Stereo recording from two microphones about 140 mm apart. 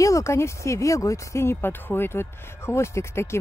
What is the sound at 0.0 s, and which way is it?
Speech, 20° left (ahead or behind).